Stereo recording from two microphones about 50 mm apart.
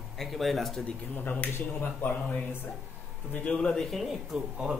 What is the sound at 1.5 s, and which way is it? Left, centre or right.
Speech, left.